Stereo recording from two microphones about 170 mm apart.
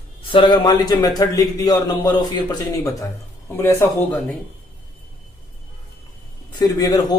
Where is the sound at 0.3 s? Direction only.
30° left (ahead or behind).